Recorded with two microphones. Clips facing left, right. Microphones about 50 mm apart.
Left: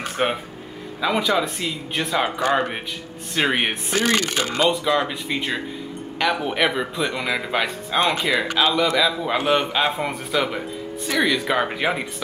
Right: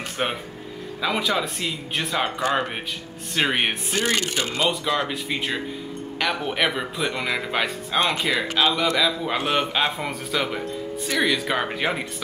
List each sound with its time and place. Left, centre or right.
0.2 s speech: centre
3.9 s speech: left
4.6 s speech: centre